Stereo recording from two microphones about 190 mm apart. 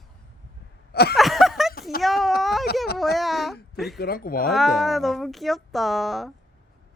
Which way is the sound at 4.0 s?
50° left (ahead or behind).